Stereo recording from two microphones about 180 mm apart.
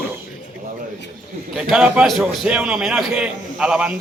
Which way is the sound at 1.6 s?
5° right (ahead or behind).